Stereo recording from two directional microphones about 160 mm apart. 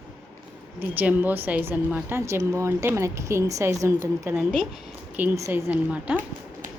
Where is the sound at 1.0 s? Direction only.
10° right (ahead or behind).